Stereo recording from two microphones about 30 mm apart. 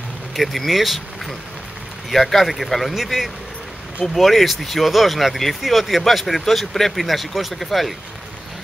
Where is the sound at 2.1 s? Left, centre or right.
Centre.